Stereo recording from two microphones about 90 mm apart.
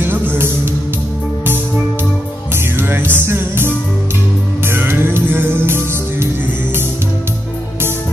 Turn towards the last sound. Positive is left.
turn(degrees=-25)  # may be behind; listen again after turning